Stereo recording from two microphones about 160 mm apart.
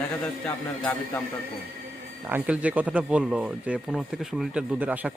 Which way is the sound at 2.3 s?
10° right (ahead or behind).